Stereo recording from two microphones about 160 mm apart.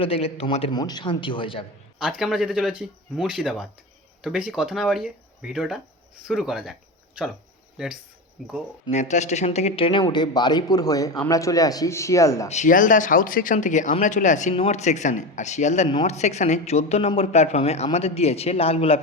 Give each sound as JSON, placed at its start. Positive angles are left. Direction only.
{"t": 0.0, "sound": "a man's voice", "side_deg": 35}
{"t": 2.0, "sound": "speech", "side_deg": -5}
{"t": 8.9, "sound": "speech", "side_deg": 45}
{"t": 12.5, "sound": "a man's voice", "side_deg": 50}